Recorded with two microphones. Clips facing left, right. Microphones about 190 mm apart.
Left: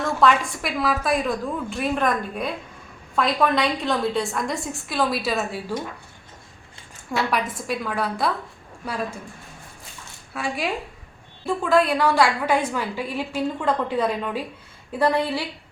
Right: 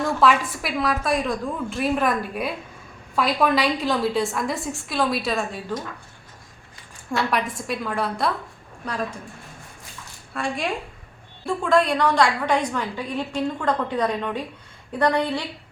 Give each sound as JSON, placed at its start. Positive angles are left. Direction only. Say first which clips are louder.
{"t": 0.2, "sound": "a woman's voice", "louder": "left 2 dB", "side_deg": -5}
{"t": 7.2, "sound": "a woman's voice", "louder": "even", "side_deg": 0}
{"t": 10.3, "sound": "a woman's voice", "louder": "even", "side_deg": 5}